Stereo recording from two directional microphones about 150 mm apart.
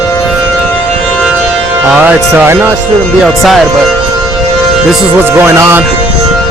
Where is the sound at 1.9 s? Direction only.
10° right (ahead or behind).